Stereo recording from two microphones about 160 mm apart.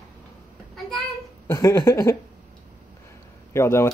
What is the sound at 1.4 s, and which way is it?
Speech, 15° left (ahead or behind).